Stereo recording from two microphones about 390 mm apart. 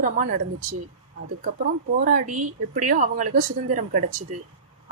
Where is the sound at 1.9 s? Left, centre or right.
Centre.